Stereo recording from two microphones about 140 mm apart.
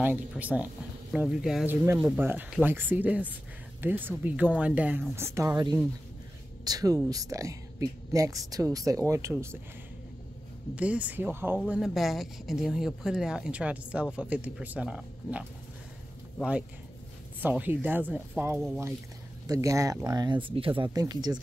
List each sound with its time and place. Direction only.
0.0 s speech: 10° right (ahead or behind)
2.0 s speech: 20° right (ahead or behind)
6.6 s speech: 25° right (ahead or behind)
10.7 s speech: 10° right (ahead or behind)
11.7 s speech: centre (ahead or behind)
17.4 s speech: 15° right (ahead or behind)
19.4 s speech: 25° right (ahead or behind)